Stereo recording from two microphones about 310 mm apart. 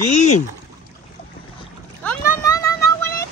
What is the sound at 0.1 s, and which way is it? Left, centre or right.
Speech, left.